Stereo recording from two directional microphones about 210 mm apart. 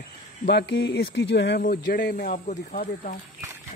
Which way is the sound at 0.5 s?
55° left (ahead or behind).